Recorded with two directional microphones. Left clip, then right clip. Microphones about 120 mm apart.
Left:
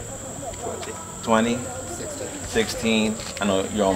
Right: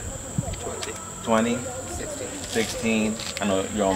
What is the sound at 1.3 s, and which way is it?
Speech, 30° left (ahead or behind).